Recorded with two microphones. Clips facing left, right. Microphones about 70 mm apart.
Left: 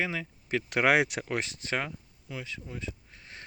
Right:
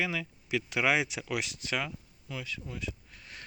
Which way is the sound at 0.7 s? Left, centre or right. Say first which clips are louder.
Left 5 dB; left.